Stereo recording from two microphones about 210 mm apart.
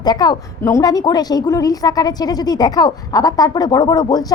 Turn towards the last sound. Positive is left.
turn(degrees=20)  # may be behind; listen again after turning